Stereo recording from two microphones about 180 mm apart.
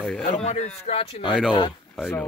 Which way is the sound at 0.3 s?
35° left (ahead or behind).